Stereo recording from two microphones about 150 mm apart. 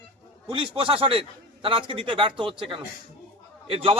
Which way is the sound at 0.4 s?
35° right (ahead or behind).